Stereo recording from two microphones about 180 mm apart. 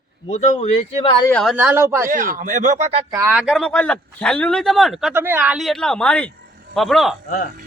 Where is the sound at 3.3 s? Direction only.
Centre (ahead or behind).